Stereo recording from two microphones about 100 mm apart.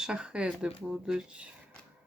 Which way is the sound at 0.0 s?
10° right (ahead or behind).